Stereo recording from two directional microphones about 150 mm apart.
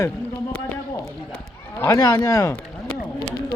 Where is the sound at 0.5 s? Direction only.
10° left (ahead or behind).